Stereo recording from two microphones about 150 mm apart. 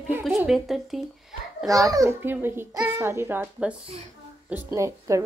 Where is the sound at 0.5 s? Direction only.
Centre (ahead or behind).